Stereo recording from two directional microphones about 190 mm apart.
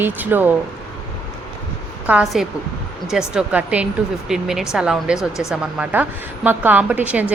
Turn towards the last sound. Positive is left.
turn(degrees=-10)  # may be behind; listen again after turning